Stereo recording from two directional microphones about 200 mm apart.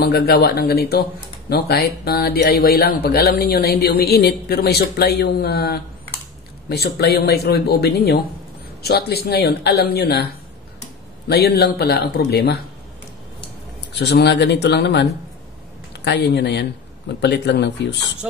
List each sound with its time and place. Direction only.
0.0 s speech: 50° left (ahead or behind)
11.2 s speech: 55° left (ahead or behind)
13.9 s speech: 55° left (ahead or behind)
18.2 s speech: 5° right (ahead or behind)